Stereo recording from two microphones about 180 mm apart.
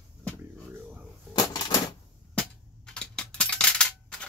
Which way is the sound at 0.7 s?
10° right (ahead or behind).